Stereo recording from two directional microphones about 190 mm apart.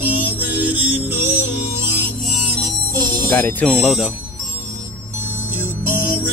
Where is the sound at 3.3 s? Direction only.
10° left (ahead or behind).